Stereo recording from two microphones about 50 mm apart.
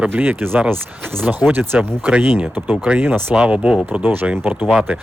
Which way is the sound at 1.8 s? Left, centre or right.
Right.